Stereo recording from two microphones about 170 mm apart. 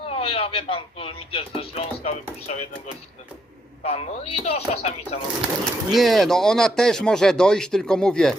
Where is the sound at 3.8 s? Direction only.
35° left (ahead or behind).